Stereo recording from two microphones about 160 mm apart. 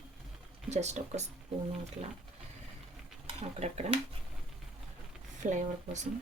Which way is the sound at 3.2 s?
40° right (ahead or behind).